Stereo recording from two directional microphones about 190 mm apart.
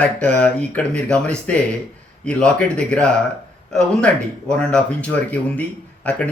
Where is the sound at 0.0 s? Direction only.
5° left (ahead or behind).